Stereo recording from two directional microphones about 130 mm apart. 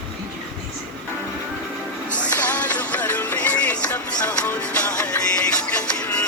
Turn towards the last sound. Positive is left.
turn(degrees=10)  # may be behind; listen again after turning